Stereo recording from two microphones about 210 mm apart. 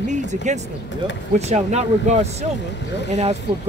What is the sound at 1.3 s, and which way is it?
Speech, 30° right (ahead or behind).